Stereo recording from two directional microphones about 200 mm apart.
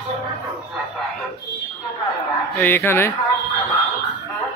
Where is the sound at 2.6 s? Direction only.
10° left (ahead or behind).